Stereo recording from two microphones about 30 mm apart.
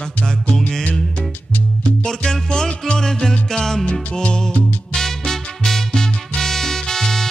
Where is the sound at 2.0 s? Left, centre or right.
Left.